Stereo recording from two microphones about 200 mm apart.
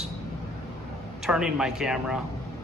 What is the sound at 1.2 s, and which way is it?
Speech, 5° right (ahead or behind).